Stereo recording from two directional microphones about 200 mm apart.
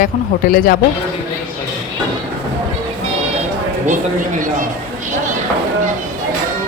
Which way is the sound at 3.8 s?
40° right (ahead or behind).